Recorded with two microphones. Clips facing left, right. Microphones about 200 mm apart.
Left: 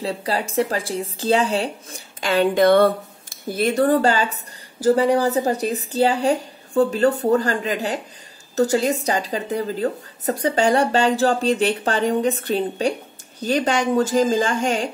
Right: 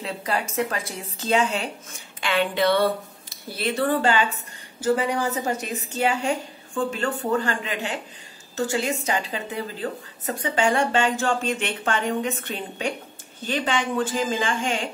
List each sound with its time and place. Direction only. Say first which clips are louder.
0.0 s speech: left 4 dB; 30° left (ahead or behind)